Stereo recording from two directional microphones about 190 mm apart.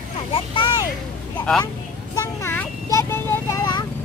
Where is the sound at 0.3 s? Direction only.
25° left (ahead or behind).